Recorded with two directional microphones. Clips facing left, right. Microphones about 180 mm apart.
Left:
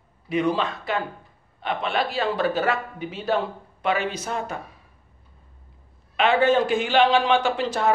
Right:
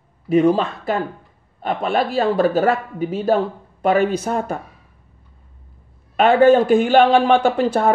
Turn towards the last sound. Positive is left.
turn(degrees=-55)  # may be behind; listen again after turning